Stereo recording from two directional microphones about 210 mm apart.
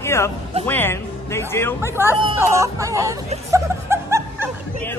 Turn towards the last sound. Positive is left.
turn(degrees=-10)  # may be behind; listen again after turning